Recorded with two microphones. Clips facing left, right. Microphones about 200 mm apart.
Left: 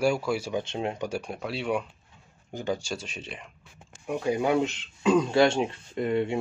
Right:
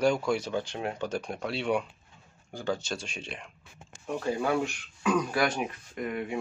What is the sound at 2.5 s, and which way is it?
Speech, 20° left (ahead or behind).